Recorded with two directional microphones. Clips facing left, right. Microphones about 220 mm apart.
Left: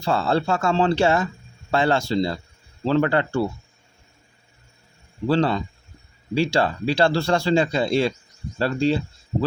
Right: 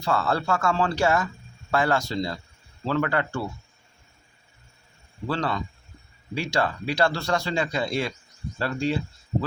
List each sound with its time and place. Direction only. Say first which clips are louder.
0.0 s a man's voice: left 4 dB; 25° left (ahead or behind)
5.3 s a man's voice: left 7 dB; 30° left (ahead or behind)